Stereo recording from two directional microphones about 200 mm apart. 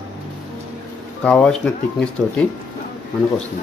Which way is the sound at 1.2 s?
5° left (ahead or behind).